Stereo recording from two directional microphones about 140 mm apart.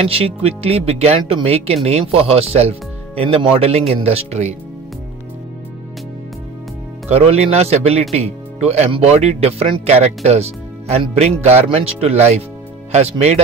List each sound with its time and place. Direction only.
0.1 s speech: 45° right (ahead or behind)
7.1 s speech: 50° right (ahead or behind)